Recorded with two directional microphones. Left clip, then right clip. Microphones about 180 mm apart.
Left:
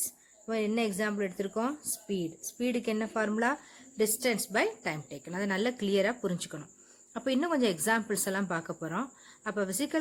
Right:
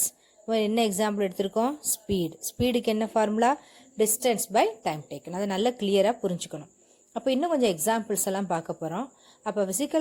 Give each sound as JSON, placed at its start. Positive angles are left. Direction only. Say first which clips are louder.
{"t": 0.4, "sound": "speech", "louder": "right 6 dB", "side_deg": -25}